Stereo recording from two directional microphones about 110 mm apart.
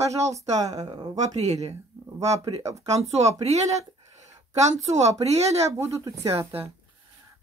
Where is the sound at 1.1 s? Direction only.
90° right.